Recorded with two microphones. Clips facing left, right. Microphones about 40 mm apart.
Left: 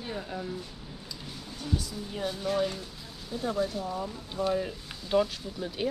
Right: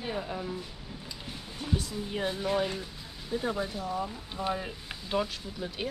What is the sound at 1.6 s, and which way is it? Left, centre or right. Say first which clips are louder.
Speech: right 1 dB; right.